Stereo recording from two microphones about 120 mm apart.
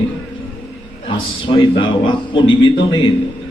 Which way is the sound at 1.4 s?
45° left (ahead or behind).